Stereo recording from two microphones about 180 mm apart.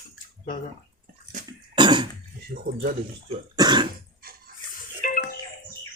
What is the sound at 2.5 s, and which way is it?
Speech, 45° right (ahead or behind).